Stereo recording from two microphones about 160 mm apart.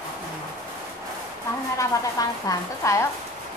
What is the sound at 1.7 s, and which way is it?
A woman's voice, 20° left (ahead or behind).